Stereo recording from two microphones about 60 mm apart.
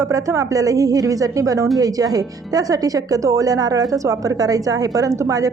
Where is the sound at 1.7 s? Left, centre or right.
Right.